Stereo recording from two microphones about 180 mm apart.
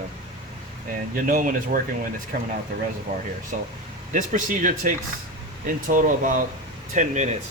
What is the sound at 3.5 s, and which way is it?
Speech, 45° right (ahead or behind).